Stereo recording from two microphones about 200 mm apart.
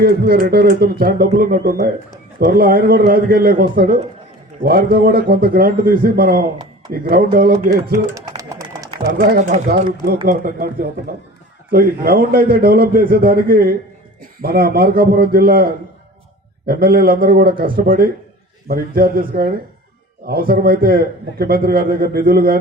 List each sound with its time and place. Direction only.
0.0 s a man's voice: 50° right (ahead or behind)
8.1 s bird: 15° right (ahead or behind)
9.0 s a man's voice: 50° right (ahead or behind)